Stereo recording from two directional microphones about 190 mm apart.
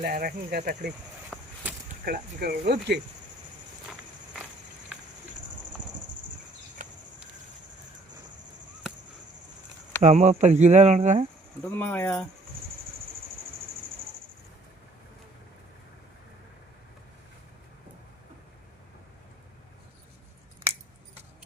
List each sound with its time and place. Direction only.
0.0 s speech: 50° right (ahead or behind)
1.3 s a sound: centre (ahead or behind)
2.0 s speech: 55° right (ahead or behind)
10.0 s speech: 40° right (ahead or behind)
11.6 s speech: 10° left (ahead or behind)